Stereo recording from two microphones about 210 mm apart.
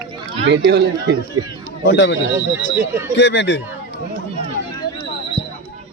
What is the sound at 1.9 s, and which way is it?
Speech, 55° left (ahead or behind).